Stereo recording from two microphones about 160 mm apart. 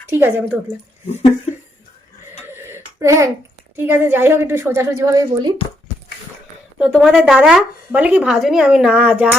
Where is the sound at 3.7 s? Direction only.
15° right (ahead or behind).